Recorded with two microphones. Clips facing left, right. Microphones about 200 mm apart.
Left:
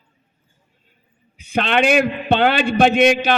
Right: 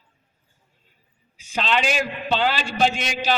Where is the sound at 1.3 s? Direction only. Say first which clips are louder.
Left 5 dB; 60° left (ahead or behind).